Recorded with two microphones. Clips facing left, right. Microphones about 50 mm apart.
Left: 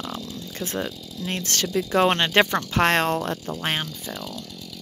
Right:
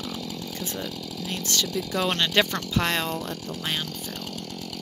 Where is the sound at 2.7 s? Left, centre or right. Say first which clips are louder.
Left 6 dB; left.